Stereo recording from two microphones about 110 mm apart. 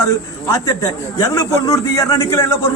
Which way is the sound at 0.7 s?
30° left (ahead or behind).